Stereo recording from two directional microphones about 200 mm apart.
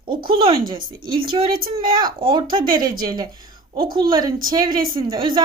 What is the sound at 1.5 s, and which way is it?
Speech, 45° right (ahead or behind).